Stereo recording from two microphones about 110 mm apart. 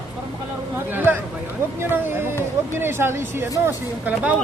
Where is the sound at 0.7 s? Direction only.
20° right (ahead or behind).